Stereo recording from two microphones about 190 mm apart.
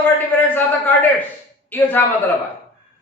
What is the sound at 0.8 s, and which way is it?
A man's voice, 10° left (ahead or behind).